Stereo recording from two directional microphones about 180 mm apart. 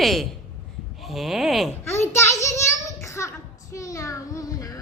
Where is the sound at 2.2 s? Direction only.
15° left (ahead or behind).